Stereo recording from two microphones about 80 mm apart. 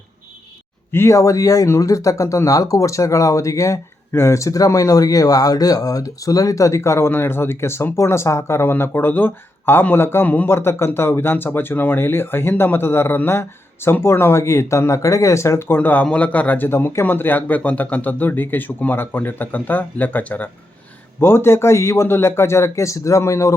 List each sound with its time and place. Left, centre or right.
0.9 s a man's voice: left
21.2 s speech: left